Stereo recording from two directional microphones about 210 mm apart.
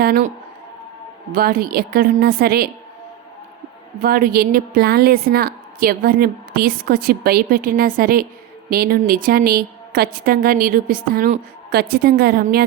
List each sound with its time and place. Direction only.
0.0 s a woman's voice: 40° right (ahead or behind)
4.0 s a woman's voice: 45° right (ahead or behind)